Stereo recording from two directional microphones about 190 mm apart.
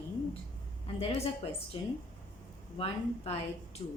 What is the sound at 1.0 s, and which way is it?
Speech, 30° left (ahead or behind).